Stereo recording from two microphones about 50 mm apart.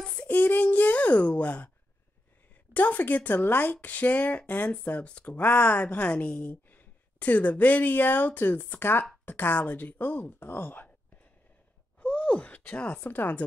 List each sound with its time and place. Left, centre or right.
0.0 s child singing: left
0.3 s a child's voice: left
2.7 s a woman's voice: left
3.7 s a woman's voice: left
12.0 s gasp: left